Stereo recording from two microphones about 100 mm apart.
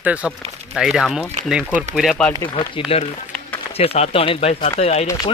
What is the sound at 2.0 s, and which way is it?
Speech, 10° left (ahead or behind).